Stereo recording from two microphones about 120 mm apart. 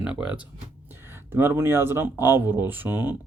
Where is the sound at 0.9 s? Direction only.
20° right (ahead or behind).